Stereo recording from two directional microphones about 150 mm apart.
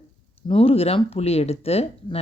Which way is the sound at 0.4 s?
40° left (ahead or behind).